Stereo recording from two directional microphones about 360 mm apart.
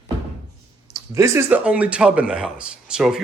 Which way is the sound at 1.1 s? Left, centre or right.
Centre.